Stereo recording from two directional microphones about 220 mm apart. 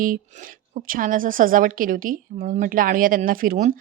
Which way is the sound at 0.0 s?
40° right (ahead or behind).